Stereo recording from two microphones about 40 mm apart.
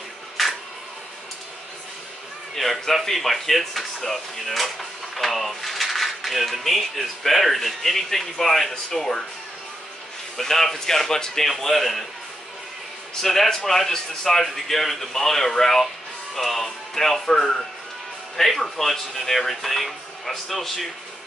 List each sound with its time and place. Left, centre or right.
0.4 s camera: centre
2.5 s speech: centre
10.3 s speech: centre
13.1 s speech: centre
17.4 s speech: centre
18.3 s speech: centre